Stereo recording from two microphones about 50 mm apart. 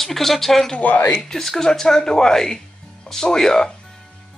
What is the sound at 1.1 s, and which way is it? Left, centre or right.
Speech, centre.